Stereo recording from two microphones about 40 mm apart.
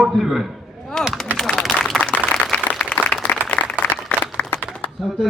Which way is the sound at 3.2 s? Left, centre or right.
Left.